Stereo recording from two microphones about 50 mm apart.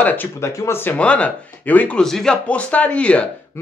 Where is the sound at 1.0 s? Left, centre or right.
Left.